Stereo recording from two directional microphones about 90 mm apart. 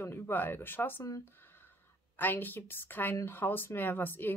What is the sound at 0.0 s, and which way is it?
Speech, 25° left (ahead or behind).